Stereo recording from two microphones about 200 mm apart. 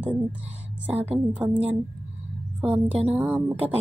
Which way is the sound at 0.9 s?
30° right (ahead or behind).